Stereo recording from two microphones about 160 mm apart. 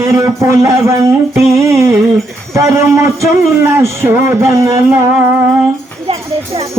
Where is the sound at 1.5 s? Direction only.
20° right (ahead or behind).